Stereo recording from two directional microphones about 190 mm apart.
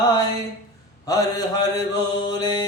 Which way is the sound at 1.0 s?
20° left (ahead or behind).